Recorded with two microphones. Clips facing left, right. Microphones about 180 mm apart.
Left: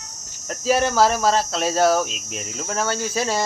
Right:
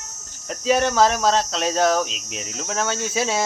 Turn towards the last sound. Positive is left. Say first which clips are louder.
# even
turn(degrees=0)  # may be behind; listen again after turning